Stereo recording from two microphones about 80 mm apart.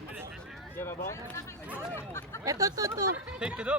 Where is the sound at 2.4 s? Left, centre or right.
Right.